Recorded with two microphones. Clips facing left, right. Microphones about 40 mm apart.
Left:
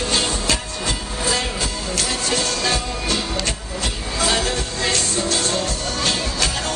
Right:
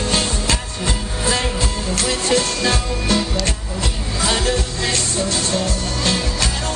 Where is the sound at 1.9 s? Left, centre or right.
Right.